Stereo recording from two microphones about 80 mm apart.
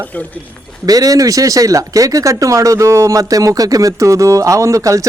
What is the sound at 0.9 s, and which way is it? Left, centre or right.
Speech, right.